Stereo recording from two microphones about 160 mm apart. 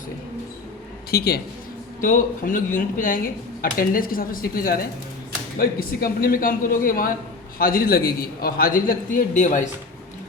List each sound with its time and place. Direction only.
1.1 s a man's voice: 75° left (ahead or behind)
2.0 s a man's voice: 55° left (ahead or behind)